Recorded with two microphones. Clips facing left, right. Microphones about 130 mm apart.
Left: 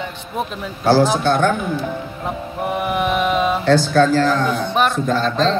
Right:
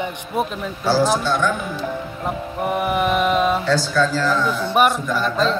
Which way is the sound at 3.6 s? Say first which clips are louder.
Left 5 dB; 60° left (ahead or behind).